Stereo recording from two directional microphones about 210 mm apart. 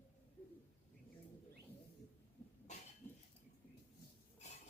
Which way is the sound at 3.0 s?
10° left (ahead or behind).